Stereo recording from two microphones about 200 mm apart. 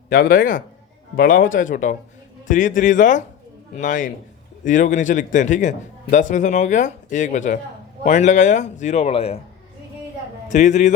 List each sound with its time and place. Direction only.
0.1 s a man's voice: 45° left (ahead or behind)
10.5 s a man's voice: 35° left (ahead or behind)